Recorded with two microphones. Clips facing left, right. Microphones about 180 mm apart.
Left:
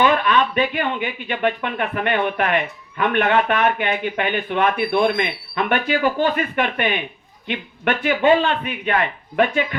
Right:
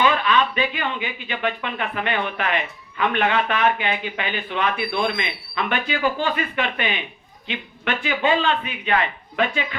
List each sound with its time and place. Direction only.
0.0 s speech: 50° left (ahead or behind)